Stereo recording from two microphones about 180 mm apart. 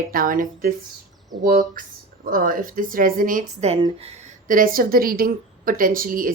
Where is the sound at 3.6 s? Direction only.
35° right (ahead or behind).